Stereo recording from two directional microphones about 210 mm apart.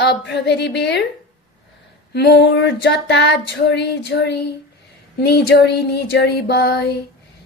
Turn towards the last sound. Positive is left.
turn(degrees=50)  # may be behind; listen again after turning